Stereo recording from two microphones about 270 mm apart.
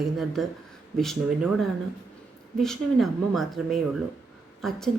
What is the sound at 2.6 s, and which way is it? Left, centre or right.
Speech, centre.